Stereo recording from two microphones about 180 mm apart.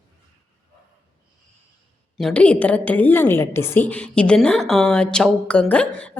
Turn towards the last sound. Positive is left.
turn(degrees=5)  # may be behind; listen again after turning